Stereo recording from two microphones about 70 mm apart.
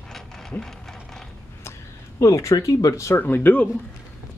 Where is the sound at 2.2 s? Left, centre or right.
Left.